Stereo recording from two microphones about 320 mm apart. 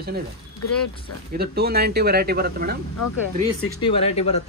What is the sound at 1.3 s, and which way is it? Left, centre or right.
Speech, right.